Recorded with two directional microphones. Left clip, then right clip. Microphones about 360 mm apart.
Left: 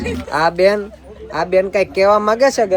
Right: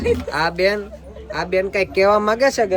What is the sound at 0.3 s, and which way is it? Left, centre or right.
Speech, centre.